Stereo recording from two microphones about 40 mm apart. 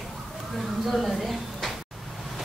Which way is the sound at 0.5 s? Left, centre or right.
Centre.